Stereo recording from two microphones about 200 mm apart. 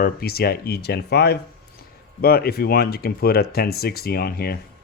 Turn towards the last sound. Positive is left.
turn(degrees=50)  # may be behind; listen again after turning